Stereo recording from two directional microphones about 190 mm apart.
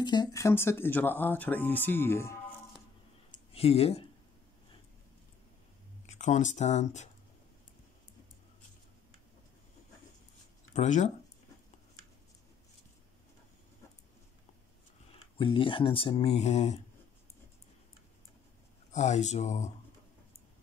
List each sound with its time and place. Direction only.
0.0 s speech: 20° left (ahead or behind)
3.5 s speech: 30° left (ahead or behind)
6.0 s speech: 40° left (ahead or behind)
10.7 s speech: 40° left (ahead or behind)
15.3 s speech: 25° left (ahead or behind)
18.9 s speech: 35° left (ahead or behind)